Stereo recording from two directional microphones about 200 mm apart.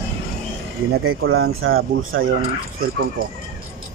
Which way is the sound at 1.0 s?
90° right.